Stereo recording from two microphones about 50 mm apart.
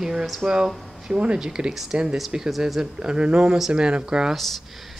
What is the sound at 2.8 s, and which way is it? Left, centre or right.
Speech, centre.